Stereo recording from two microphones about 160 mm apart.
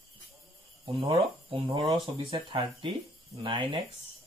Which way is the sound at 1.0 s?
35° right (ahead or behind).